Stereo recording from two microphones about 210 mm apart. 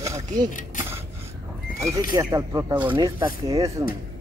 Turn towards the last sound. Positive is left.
turn(degrees=-15)  # may be behind; listen again after turning